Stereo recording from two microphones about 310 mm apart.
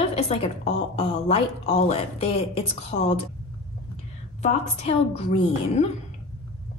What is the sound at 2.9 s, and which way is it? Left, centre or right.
Speech, left.